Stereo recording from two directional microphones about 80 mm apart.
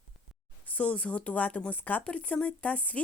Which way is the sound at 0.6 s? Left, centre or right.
Centre.